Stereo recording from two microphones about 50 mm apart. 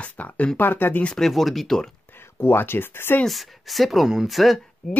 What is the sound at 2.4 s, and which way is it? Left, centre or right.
Speech, left.